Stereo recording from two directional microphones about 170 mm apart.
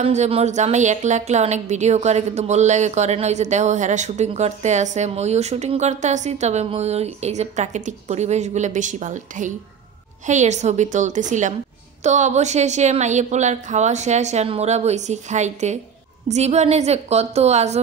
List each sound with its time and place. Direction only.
0.0 s a woman's voice: 40° right (ahead or behind)